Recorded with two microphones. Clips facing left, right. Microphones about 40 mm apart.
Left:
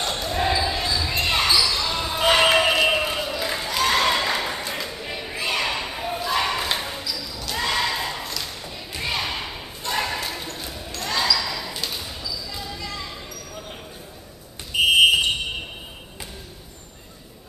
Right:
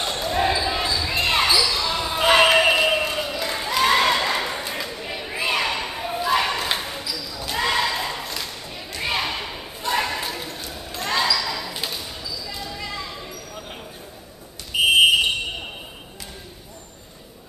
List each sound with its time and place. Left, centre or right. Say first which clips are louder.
0.0 s basketball bounce: right 2 dB; centre
2.9 s a sound: even; centre
3.6 s a sound: right 3 dB; centre
9.0 s basketball bounce: right 2 dB; centre
10.7 s basketball bounce: right 3 dB; centre
11.3 s basketball bounce: right 1 dB; centre
12.4 s basketball bounce: right 1 dB; centre
14.7 s fire alarm: even; centre